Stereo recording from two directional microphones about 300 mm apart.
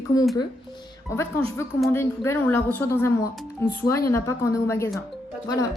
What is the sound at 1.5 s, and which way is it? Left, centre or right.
A woman's voice, centre.